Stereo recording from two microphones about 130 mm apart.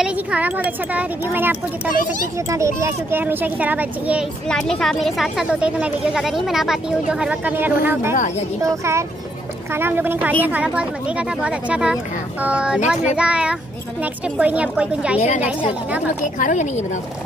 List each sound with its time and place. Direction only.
0.0 s speech: 10° right (ahead or behind)
4.5 s speech: 5° left (ahead or behind)
15.1 s a woman's voice: 60° left (ahead or behind)
16.3 s a woman's voice: 75° left (ahead or behind)